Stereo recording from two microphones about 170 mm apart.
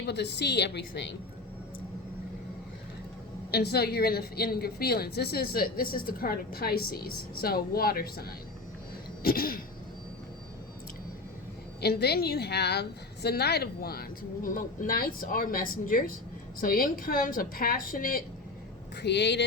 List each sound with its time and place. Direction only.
0.0 s a woman's voice: 80° left
3.5 s a woman's voice: 70° left (ahead or behind)
11.8 s a woman's voice: 70° left (ahead or behind)
19.0 s speech: 90° left